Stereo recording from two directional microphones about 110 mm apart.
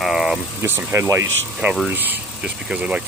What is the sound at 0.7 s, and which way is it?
Speech, 20° right (ahead or behind).